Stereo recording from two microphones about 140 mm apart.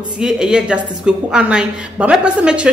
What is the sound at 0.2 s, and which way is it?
A woman's voice, 5° right (ahead or behind).